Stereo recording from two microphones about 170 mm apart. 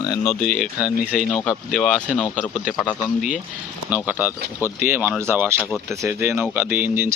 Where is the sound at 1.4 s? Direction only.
5° left (ahead or behind).